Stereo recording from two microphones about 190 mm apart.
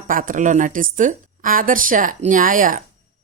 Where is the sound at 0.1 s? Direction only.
45° right (ahead or behind).